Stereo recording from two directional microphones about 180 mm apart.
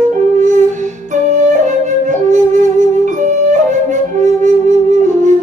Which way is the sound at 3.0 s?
45° right (ahead or behind).